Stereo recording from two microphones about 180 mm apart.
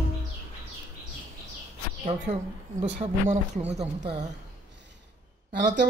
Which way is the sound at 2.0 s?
35° right (ahead or behind).